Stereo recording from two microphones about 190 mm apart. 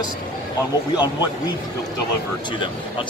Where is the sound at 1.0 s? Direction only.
20° left (ahead or behind).